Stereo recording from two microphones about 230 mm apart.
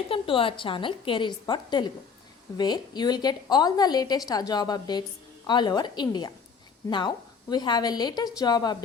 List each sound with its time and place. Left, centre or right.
0.1 s a woman's voice: left
7.5 s a woman's voice: centre